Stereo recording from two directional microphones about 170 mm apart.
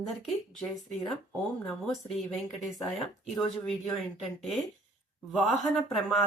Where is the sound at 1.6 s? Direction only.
Centre (ahead or behind).